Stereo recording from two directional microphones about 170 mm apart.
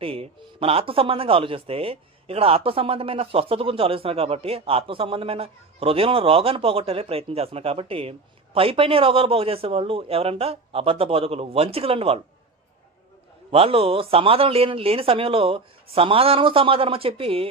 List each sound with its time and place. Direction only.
0.0 s a man's voice: 35° right (ahead or behind)
13.5 s a man's voice: 35° right (ahead or behind)